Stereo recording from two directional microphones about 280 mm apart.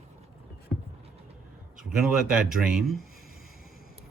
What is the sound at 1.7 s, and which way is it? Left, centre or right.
Speech, centre.